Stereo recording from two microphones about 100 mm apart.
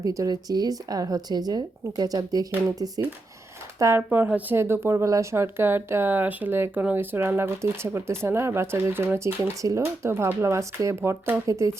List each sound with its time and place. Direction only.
0.0 s speech: 35° right (ahead or behind)
3.8 s speech: 25° right (ahead or behind)